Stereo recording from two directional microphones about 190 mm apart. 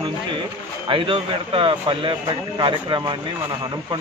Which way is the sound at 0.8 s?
25° right (ahead or behind).